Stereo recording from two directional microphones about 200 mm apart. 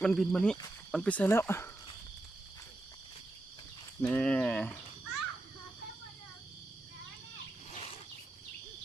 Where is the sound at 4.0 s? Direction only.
5° left (ahead or behind).